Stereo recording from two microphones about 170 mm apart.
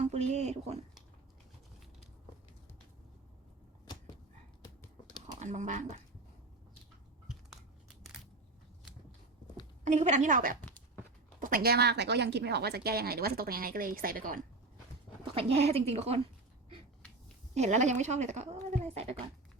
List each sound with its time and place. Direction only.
0.0 s speech: 40° right (ahead or behind)
5.2 s speech: 45° right (ahead or behind)
9.8 s speech: 45° right (ahead or behind)
10.6 s a sound: 10° left (ahead or behind)
11.3 s a woman's voice: 55° right (ahead or behind)
15.2 s a woman's voice: 35° right (ahead or behind)
17.5 s speech: 40° right (ahead or behind)